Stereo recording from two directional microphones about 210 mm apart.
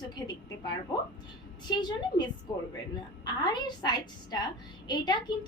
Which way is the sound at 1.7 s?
20° left (ahead or behind).